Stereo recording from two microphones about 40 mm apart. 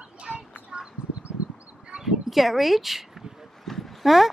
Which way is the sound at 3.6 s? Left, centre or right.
Centre.